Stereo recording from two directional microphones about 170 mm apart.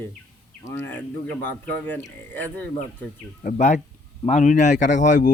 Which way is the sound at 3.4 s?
50° left (ahead or behind).